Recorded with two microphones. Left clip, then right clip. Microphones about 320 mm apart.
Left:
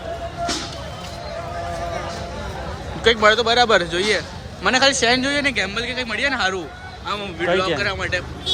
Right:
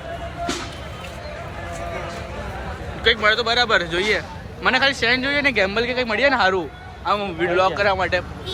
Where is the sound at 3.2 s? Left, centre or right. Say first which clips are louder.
Left 3 dB; centre.